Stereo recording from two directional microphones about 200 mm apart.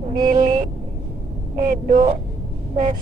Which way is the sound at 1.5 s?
35° right (ahead or behind).